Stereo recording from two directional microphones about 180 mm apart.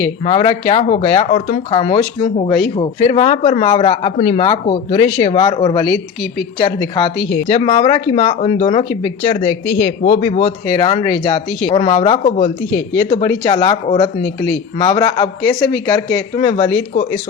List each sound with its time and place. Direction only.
0.3 s speech: 30° left (ahead or behind)
10.7 s speech: 25° left (ahead or behind)
13.4 s speech: 25° left (ahead or behind)
14.8 s speech: 25° left (ahead or behind)
16.9 s speech: 40° left (ahead or behind)